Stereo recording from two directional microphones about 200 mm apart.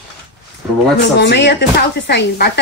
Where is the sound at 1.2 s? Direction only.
60° left (ahead or behind).